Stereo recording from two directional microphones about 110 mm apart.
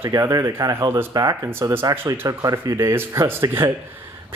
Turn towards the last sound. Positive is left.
turn(degrees=-20)  # may be behind; listen again after turning